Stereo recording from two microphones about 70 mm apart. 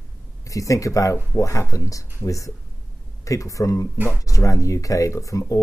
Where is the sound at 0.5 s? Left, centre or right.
Left.